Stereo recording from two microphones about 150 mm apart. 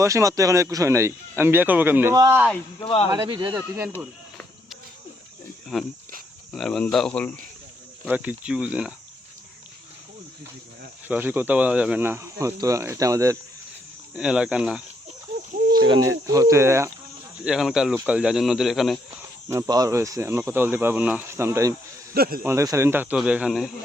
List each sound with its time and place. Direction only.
0.0 s speech: 20° right (ahead or behind)
2.8 s speech: 35° left (ahead or behind)
3.1 s speech: 30° right (ahead or behind)
6.5 s speech: centre (ahead or behind)
8.0 s speech: 10° right (ahead or behind)
11.1 s speech: 10° right (ahead or behind)
14.2 s speech: 5° right (ahead or behind)
15.7 s speech: 25° right (ahead or behind)
17.4 s speech: 5° right (ahead or behind)
19.5 s speech: 25° right (ahead or behind)
22.1 s a man's voice: 80° right
22.4 s speech: 20° right (ahead or behind); by 23.7 s 5° right (ahead or behind)